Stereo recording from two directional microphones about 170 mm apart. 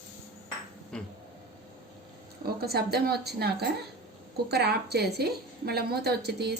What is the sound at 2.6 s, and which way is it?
A woman's voice, 70° right (ahead or behind).